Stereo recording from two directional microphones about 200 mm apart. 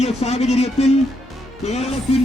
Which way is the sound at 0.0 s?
30° left (ahead or behind).